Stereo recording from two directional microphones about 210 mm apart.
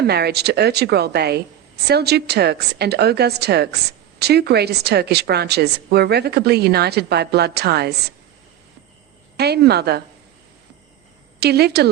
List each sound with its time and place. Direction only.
0.0 s a woman's voice: 50° right (ahead or behind)
9.4 s a woman's voice: 50° right (ahead or behind)
11.3 s a woman's voice: 50° right (ahead or behind)